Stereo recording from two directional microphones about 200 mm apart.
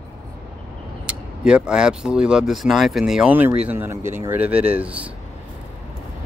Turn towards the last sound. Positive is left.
turn(degrees=-5)  # may be behind; listen again after turning